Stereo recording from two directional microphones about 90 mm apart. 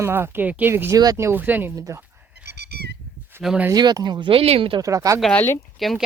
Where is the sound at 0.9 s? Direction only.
45° right (ahead or behind).